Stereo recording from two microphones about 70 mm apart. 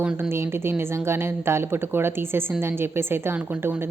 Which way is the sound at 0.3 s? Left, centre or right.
Right.